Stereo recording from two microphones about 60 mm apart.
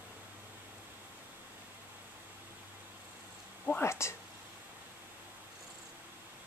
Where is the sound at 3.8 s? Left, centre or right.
Left.